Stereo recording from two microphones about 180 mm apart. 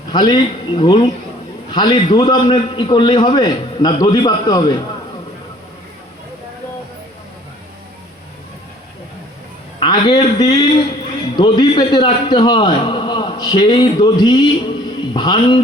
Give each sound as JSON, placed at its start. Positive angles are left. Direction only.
{"t": 0.1, "sound": "a man's voice", "side_deg": 25}
{"t": 9.8, "sound": "a man's voice", "side_deg": 25}